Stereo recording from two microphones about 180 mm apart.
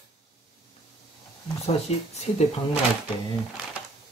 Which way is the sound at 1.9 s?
35° left (ahead or behind).